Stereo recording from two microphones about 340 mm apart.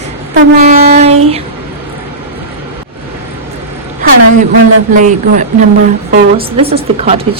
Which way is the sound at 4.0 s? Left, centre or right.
Right.